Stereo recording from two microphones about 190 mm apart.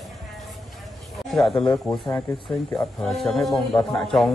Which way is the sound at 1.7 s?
15° left (ahead or behind).